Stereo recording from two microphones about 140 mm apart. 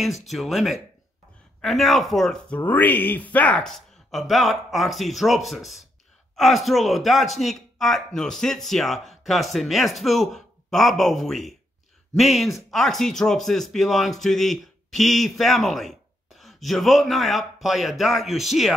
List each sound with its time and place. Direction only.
0.0 s speech: centre (ahead or behind)